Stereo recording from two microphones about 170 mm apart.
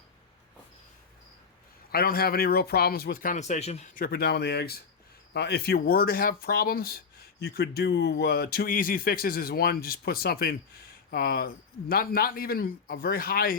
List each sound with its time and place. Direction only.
1.9 s speech: 65° left (ahead or behind); by 4.0 s 40° left (ahead or behind)
4.0 s speech: 65° left (ahead or behind)